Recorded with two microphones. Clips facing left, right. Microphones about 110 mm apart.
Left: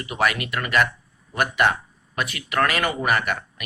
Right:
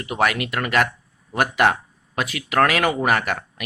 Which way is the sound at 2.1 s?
90° right.